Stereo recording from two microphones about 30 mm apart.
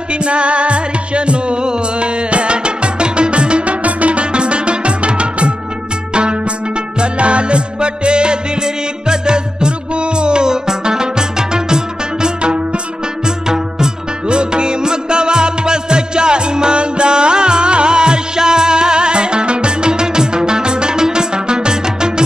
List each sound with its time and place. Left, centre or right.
0.1 s music: right
3.8 s music: right
7.0 s music: right
13.5 s music: right